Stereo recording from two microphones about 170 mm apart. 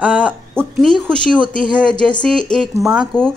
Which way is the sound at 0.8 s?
5° left (ahead or behind).